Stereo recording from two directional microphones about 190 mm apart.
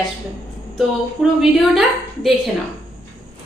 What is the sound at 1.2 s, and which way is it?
Speech, centre (ahead or behind).